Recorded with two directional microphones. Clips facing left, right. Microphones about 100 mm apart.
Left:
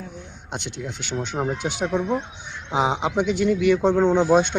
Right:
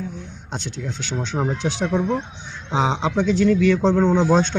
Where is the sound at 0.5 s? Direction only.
15° left (ahead or behind).